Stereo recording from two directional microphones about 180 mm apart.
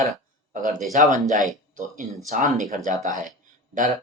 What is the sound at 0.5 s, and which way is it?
Speech, 45° right (ahead or behind).